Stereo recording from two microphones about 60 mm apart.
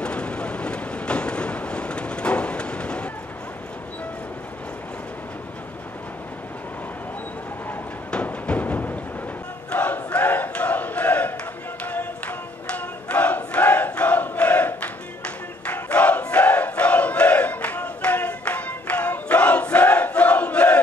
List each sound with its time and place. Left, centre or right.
0.0 s train: centre
8.1 s music: left
9.7 s battle cry: left
11.8 s a sound: left
12.6 s battle cry: left